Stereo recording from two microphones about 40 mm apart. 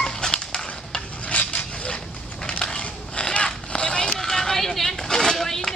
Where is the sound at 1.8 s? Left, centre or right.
Left.